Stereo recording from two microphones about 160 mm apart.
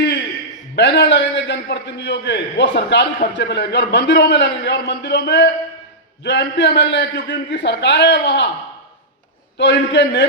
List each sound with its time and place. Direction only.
0.8 s a man's voice: 90° left
9.6 s a man's voice: 90° left